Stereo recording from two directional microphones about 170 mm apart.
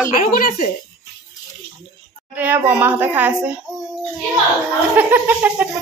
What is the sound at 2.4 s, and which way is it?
Speech, 10° right (ahead or behind).